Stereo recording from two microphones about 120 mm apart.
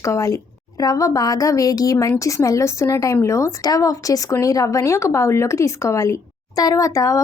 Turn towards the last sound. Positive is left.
turn(degrees=25)  # may be behind; listen again after turning